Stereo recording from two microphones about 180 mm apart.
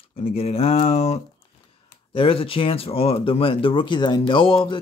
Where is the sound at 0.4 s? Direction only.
35° left (ahead or behind).